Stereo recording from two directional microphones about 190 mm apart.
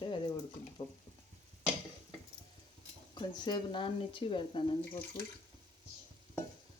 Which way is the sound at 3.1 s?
25° left (ahead or behind).